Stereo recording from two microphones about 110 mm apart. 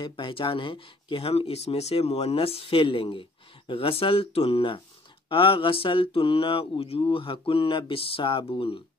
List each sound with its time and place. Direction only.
0.0 s speech: 50° left (ahead or behind)